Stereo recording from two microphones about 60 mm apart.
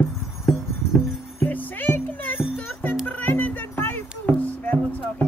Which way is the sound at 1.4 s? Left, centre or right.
Left.